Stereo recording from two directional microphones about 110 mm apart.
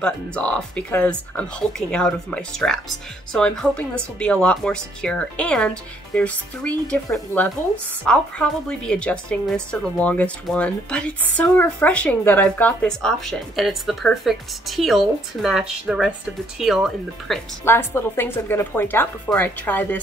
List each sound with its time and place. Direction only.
0.0 s a woman's voice: 10° left (ahead or behind)
17.6 s a woman's voice: 20° left (ahead or behind)